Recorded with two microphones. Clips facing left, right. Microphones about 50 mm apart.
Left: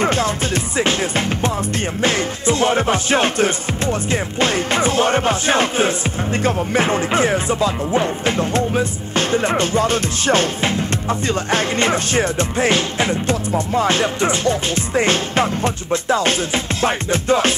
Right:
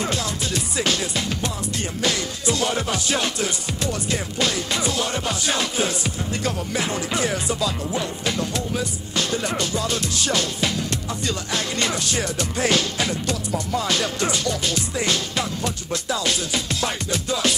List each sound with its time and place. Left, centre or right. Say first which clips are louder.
0.0 s music: left 8 dB; left